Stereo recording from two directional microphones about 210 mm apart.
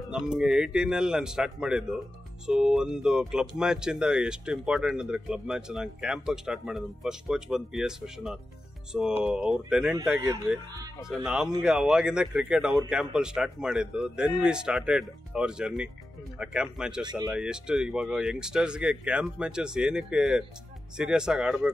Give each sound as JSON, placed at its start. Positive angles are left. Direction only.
{"t": 0.1, "sound": "speech", "side_deg": -5}
{"t": 17.0, "sound": "speech", "side_deg": -20}
{"t": 17.4, "sound": "speech", "side_deg": -5}